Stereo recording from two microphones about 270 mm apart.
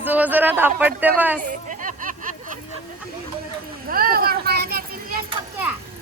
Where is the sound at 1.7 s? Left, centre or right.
Right.